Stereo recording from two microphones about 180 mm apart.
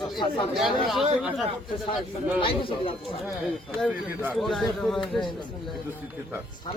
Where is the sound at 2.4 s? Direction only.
30° left (ahead or behind).